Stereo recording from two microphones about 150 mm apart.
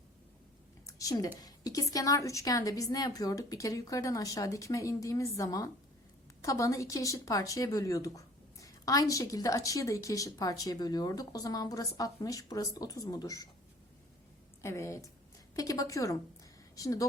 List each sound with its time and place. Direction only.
0.9 s a sound: 20° left (ahead or behind)
1.4 s speech: 25° left (ahead or behind)
14.6 s speech: 20° left (ahead or behind)